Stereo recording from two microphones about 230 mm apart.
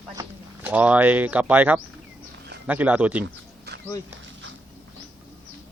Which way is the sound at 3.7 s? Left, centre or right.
Right.